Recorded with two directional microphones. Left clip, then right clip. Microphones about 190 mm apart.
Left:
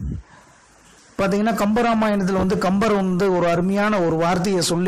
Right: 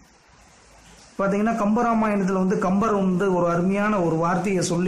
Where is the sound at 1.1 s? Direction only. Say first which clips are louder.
Left 2 dB; 40° left (ahead or behind).